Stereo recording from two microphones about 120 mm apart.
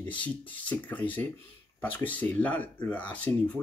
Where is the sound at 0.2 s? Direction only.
10° left (ahead or behind).